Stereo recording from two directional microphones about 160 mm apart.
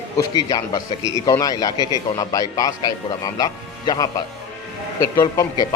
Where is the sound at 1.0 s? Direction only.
30° right (ahead or behind).